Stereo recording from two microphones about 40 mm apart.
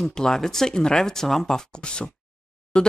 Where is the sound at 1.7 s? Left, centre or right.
Left.